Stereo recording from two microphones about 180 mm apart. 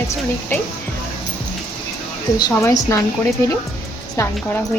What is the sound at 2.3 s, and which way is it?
Speech, 20° left (ahead or behind).